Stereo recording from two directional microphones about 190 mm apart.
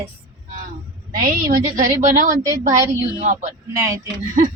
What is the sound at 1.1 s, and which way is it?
A woman's voice, 45° right (ahead or behind).